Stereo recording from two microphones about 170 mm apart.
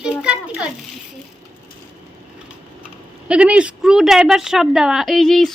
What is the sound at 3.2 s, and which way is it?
Speech, 5° right (ahead or behind).